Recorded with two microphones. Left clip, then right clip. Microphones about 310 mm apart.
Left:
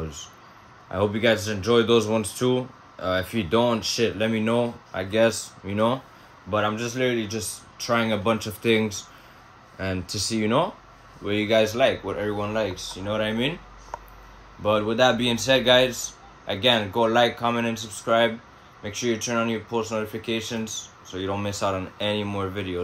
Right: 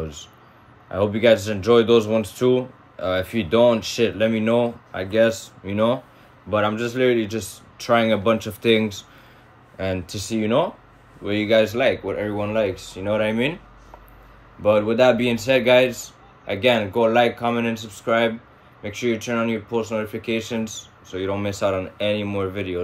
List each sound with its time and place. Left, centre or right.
0.8 s speech: centre
10.0 s speech: centre
10.3 s speech: centre
14.6 s speech: centre